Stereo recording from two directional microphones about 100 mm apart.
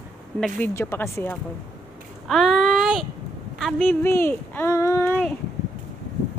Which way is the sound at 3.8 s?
20° left (ahead or behind).